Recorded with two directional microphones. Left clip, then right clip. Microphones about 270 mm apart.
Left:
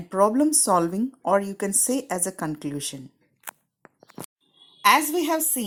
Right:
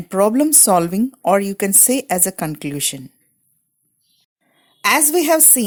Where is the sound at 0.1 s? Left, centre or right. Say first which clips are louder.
Right 5 dB; right.